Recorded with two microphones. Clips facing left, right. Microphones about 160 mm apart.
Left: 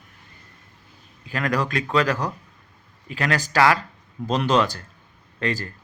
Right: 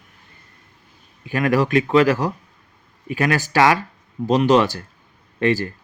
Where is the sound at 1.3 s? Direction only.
20° right (ahead or behind).